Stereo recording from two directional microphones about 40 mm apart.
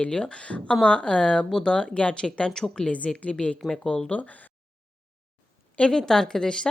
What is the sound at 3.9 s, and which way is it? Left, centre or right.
Speech, left.